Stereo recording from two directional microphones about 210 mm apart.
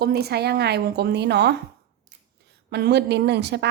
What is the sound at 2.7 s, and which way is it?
Speech, 50° right (ahead or behind).